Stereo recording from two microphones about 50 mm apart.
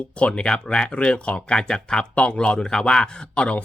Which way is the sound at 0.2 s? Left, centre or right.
Left.